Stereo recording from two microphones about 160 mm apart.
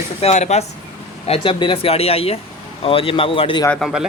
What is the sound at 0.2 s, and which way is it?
Speech, 40° left (ahead or behind).